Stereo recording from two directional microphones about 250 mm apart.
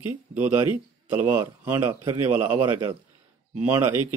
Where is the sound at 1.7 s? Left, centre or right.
Centre.